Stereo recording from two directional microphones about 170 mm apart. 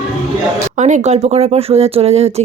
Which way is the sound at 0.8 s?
45° right (ahead or behind).